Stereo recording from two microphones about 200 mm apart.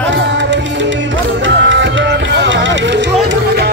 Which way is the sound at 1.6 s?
65° right (ahead or behind).